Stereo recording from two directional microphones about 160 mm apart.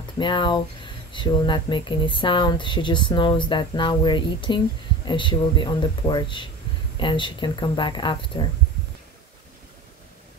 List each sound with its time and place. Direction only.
0.2 s speech: 30° left (ahead or behind)